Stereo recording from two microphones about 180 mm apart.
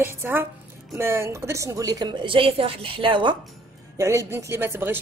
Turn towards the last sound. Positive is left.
turn(degrees=-10)  # may be behind; listen again after turning